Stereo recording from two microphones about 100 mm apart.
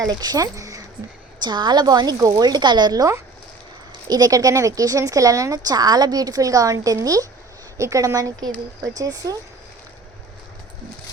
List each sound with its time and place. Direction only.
0.0 s speech: 40° right (ahead or behind)
1.4 s a woman's voice: 45° right (ahead or behind)